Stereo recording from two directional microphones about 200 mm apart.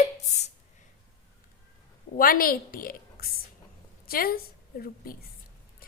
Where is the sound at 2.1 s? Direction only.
45° left (ahead or behind).